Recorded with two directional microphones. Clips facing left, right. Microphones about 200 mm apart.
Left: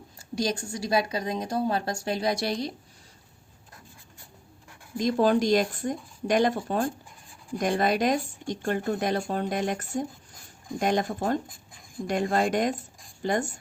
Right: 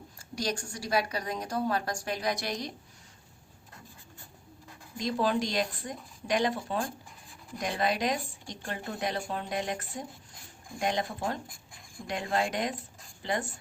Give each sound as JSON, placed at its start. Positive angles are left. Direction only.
{"t": 0.5, "sound": "a woman's voice", "side_deg": 20}
{"t": 4.9, "sound": "speech", "side_deg": 45}